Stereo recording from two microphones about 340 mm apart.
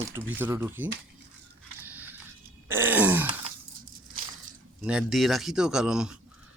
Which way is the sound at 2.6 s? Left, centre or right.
Centre.